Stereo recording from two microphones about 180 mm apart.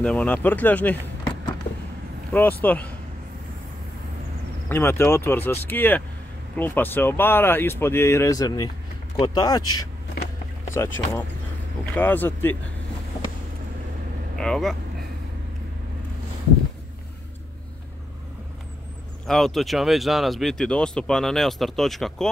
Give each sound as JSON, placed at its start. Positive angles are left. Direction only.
{"t": 0.0, "sound": "speech", "side_deg": 5}
{"t": 2.6, "sound": "speech", "side_deg": 10}
{"t": 4.6, "sound": "speech", "side_deg": 15}
{"t": 14.4, "sound": "speech", "side_deg": 5}
{"t": 19.2, "sound": "speech", "side_deg": 0}